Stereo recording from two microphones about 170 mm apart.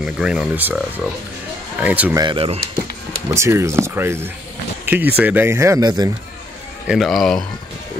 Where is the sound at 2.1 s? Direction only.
30° right (ahead or behind).